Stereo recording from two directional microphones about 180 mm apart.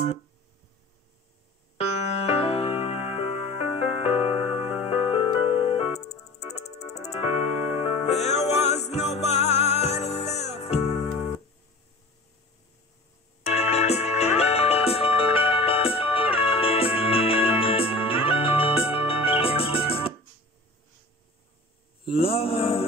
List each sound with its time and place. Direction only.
1.8 s music: 35° left (ahead or behind)
13.4 s music: 35° left (ahead or behind)
22.0 s mantra: 30° left (ahead or behind)